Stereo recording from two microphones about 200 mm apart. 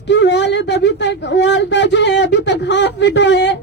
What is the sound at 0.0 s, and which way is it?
Speech, 60° left (ahead or behind).